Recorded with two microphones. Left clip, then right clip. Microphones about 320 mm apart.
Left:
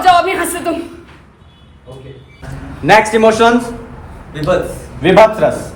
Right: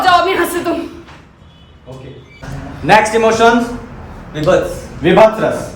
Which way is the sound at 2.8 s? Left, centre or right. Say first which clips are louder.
Left 1 dB; left.